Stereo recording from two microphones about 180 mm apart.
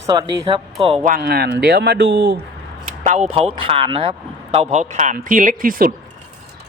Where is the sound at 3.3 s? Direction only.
35° right (ahead or behind); by 5.9 s 50° right (ahead or behind).